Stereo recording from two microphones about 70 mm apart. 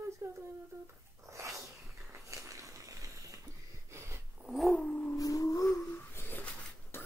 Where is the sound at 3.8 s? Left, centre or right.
Right.